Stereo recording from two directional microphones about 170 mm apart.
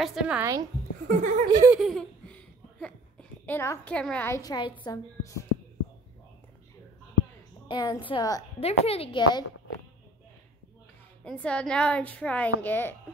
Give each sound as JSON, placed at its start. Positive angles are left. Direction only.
{"t": 0.0, "sound": "a woman's voice", "side_deg": -5}
{"t": 0.4, "sound": "a woman's voice", "side_deg": -20}
{"t": 1.0, "sound": "speech", "side_deg": -50}
{"t": 1.5, "sound": "giggle", "side_deg": -15}
{"t": 1.8, "sound": "a child's voice", "side_deg": 0}
{"t": 7.6, "sound": "a woman's voice", "side_deg": 25}
{"t": 8.5, "sound": "a woman's voice", "side_deg": 35}
{"t": 11.2, "sound": "a woman's voice", "side_deg": 5}